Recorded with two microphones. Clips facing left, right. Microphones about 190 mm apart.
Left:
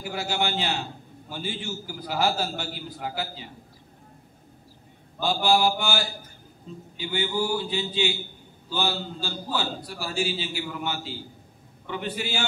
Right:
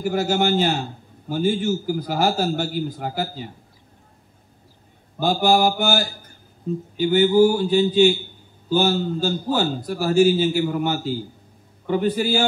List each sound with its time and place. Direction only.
0.0 s a man's voice: 45° right (ahead or behind)
5.2 s a man's voice: 45° right (ahead or behind)